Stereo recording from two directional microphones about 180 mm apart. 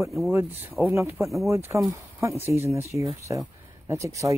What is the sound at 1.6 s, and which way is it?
Speech, 15° right (ahead or behind).